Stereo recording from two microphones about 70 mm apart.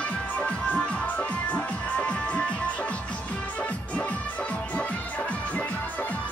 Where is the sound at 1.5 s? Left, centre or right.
Centre.